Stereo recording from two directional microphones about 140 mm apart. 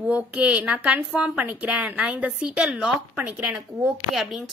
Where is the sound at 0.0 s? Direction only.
10° right (ahead or behind).